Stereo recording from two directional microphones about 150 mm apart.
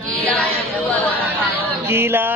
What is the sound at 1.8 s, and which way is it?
Speech, 15° right (ahead or behind).